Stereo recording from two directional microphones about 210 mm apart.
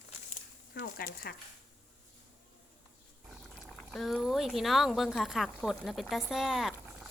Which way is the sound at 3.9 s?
Centre (ahead or behind).